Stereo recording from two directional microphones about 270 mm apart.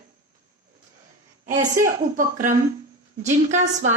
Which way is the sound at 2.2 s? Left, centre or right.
Right.